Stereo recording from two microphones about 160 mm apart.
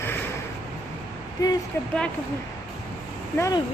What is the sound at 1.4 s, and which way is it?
Speech, 20° left (ahead or behind).